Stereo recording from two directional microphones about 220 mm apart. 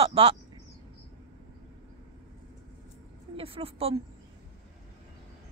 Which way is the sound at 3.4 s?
25° right (ahead or behind).